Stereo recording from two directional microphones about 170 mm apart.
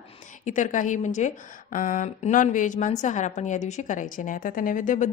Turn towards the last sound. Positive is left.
turn(degrees=50)  # may be behind; listen again after turning